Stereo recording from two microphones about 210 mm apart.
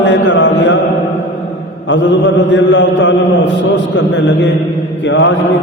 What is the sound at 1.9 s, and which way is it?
Mantra, 60° left (ahead or behind).